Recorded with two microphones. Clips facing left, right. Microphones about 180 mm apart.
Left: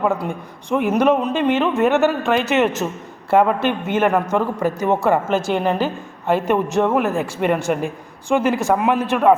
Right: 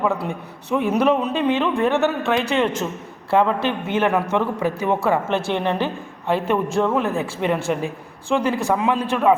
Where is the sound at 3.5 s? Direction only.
50° left (ahead or behind).